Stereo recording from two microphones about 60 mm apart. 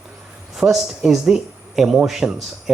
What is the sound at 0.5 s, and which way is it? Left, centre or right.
Speech, centre.